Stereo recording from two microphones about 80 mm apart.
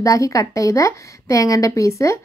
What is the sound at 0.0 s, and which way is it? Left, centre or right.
Speech, left.